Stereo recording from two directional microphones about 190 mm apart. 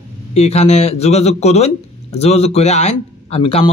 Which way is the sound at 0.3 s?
35° left (ahead or behind).